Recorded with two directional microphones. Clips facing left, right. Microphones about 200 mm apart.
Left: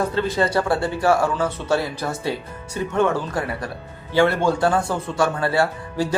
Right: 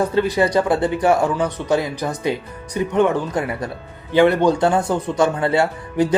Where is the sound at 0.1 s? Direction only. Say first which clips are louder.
Right 4 dB; 15° right (ahead or behind).